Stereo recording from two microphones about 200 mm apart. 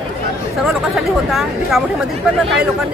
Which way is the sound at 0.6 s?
Centre (ahead or behind).